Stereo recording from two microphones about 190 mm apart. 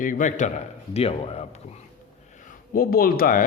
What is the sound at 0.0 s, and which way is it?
Speech, 45° left (ahead or behind).